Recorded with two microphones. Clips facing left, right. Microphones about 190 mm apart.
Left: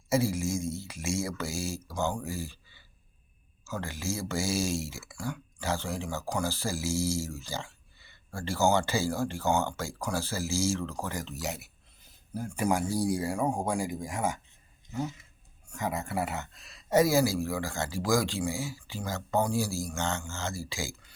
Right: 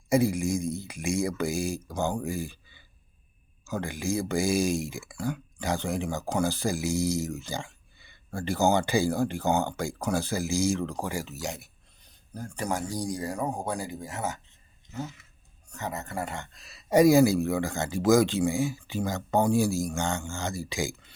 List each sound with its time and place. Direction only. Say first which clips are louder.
0.1 s speech: right 4 dB; 15° right (ahead or behind)
2.2 s a sound: right 4 dB; 15° right (ahead or behind)
3.6 s speech: right 4 dB; 15° right (ahead or behind); by 16.8 s centre (ahead or behind)
16.9 s speech: right 5 dB; 15° right (ahead or behind)